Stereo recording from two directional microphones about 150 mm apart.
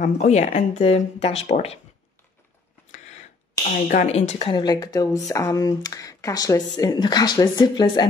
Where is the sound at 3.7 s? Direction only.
60° left (ahead or behind).